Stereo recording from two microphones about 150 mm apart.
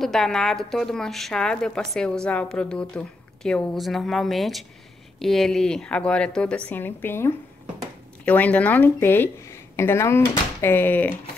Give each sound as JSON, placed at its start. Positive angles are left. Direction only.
{"t": 0.0, "sound": "a woman's voice", "side_deg": 0}